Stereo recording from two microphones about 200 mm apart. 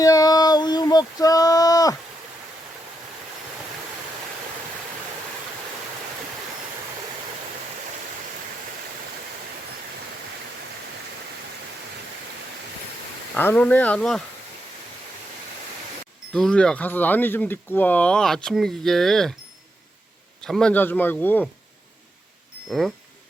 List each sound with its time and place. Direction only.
0.0 s a sound: 20° left (ahead or behind)
13.3 s speech: 10° left (ahead or behind)
16.3 s speech: 5° left (ahead or behind)
20.4 s speech: 5° left (ahead or behind)